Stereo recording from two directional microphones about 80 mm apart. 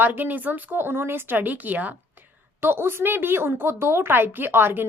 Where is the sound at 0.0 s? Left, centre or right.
Right.